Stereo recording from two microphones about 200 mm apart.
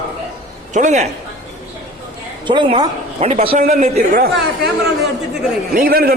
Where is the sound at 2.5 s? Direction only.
25° right (ahead or behind).